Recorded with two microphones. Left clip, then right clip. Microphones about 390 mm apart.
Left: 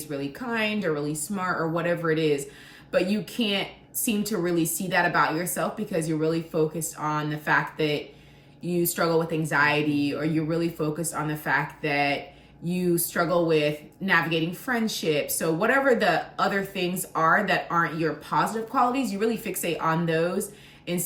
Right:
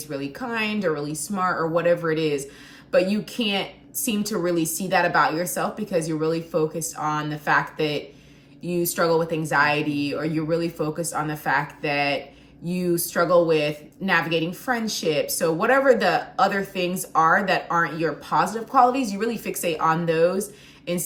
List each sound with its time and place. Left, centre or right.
0.1 s a woman's voice: centre